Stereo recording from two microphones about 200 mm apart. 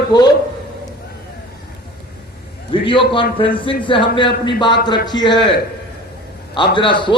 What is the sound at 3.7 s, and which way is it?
A man's voice, 25° left (ahead or behind).